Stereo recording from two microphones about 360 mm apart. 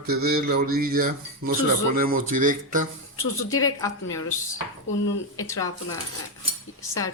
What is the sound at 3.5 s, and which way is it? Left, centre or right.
Speech, centre.